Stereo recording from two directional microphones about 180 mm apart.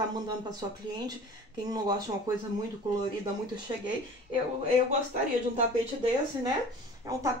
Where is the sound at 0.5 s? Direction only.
25° right (ahead or behind).